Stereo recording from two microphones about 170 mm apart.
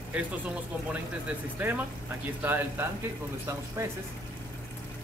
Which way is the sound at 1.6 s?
10° right (ahead or behind).